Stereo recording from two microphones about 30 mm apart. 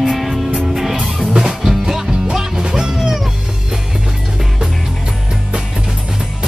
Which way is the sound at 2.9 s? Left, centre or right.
Centre.